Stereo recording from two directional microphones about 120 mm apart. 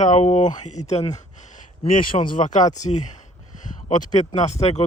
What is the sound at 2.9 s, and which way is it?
Speech, 75° left (ahead or behind).